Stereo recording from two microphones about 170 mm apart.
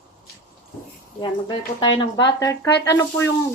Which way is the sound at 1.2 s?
30° left (ahead or behind).